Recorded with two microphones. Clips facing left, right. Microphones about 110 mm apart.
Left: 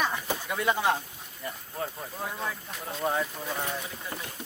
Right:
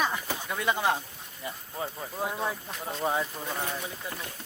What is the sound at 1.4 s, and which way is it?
Speech, 10° right (ahead or behind).